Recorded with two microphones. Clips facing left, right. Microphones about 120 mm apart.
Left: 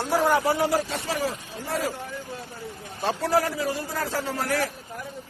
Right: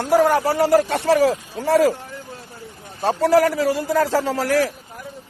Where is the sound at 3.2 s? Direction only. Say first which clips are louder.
Right 9 dB; 80° right.